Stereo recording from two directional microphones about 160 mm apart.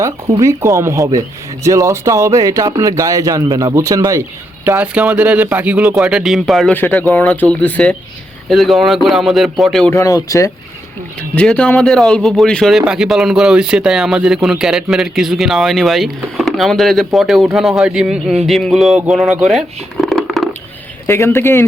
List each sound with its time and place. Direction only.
0.0 s speech: 20° right (ahead or behind); by 6.7 s centre (ahead or behind)
6.7 s speech: 10° left (ahead or behind)
9.9 s speech: 20° left (ahead or behind)
11.2 s speech: 10° left (ahead or behind)
19.5 s a sound: centre (ahead or behind)
21.1 s speech: 15° left (ahead or behind)